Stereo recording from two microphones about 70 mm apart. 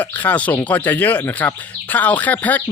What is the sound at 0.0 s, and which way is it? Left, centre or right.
Speech, left.